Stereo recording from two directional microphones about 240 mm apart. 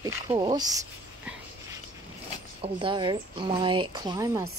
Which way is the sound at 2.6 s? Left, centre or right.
Right.